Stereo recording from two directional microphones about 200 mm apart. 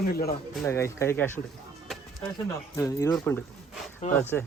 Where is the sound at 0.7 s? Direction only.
15° left (ahead or behind).